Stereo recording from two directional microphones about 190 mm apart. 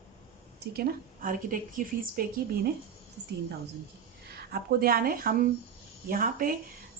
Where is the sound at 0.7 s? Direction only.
50° right (ahead or behind).